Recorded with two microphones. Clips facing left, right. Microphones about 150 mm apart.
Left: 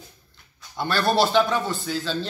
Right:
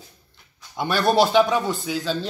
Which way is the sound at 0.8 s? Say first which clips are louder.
Right 2 dB; 15° right (ahead or behind).